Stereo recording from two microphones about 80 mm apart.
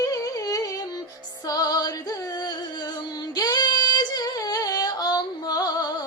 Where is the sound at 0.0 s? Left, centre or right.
Left.